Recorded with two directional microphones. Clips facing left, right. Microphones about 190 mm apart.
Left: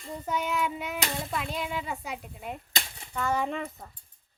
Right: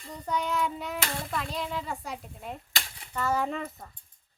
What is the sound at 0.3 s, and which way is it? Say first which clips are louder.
A child's voice: even; 5° left (ahead or behind).